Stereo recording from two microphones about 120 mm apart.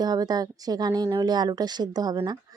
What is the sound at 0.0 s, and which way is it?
Speech, 35° right (ahead or behind).